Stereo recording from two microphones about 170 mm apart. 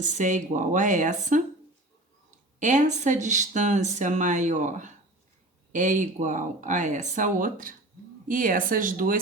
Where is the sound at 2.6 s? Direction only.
45° right (ahead or behind).